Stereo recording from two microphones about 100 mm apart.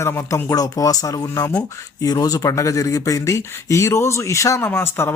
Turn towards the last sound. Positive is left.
turn(degrees=25)  # may be behind; listen again after turning